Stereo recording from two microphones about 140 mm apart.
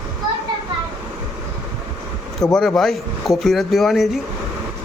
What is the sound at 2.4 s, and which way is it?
Speech, 5° left (ahead or behind).